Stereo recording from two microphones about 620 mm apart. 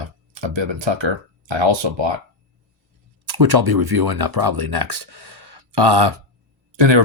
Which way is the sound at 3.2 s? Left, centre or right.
Right.